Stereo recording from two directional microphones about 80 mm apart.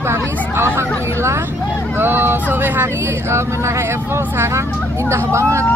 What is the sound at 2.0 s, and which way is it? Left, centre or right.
Vehicle, right.